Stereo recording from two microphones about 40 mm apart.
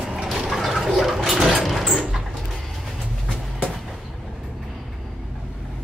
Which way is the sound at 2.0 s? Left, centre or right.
Centre.